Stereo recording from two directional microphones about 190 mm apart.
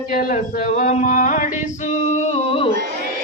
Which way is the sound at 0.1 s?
45° left (ahead or behind).